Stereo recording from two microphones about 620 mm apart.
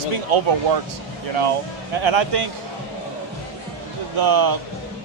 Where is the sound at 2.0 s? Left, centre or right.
Right.